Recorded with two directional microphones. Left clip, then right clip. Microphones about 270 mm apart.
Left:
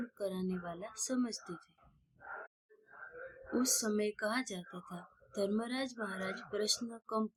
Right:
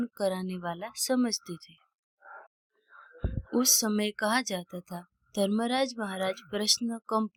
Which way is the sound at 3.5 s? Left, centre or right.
Right.